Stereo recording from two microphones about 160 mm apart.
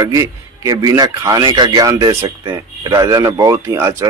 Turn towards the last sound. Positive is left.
turn(degrees=-15)  # may be behind; listen again after turning